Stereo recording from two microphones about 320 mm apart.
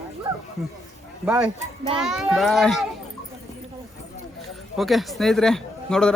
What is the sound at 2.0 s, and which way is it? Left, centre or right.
Speech, centre.